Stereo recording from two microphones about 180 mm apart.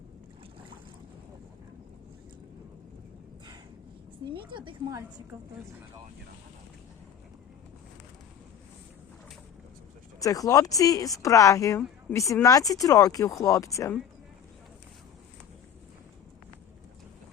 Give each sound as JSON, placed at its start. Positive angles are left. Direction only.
{"t": 4.4, "sound": "a woman's voice", "side_deg": -25}
{"t": 10.2, "sound": "speech", "side_deg": 20}